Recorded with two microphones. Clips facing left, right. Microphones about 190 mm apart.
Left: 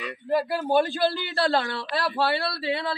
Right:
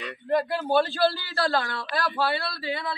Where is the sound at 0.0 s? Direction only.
5° left (ahead or behind).